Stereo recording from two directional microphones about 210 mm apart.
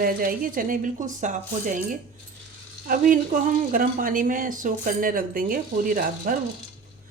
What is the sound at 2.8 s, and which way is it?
A woman's voice, 40° right (ahead or behind).